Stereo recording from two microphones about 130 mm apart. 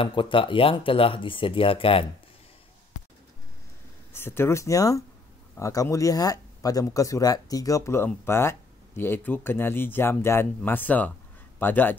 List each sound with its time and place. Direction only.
0.0 s speech: 40° left (ahead or behind)
4.1 s a man's voice: 20° left (ahead or behind)